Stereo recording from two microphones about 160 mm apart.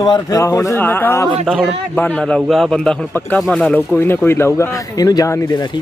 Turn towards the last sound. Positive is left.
turn(degrees=20)  # may be behind; listen again after turning